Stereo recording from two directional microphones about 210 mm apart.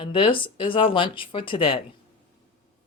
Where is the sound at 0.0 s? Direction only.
25° left (ahead or behind).